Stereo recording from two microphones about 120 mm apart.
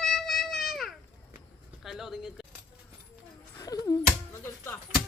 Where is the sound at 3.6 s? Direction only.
30° left (ahead or behind).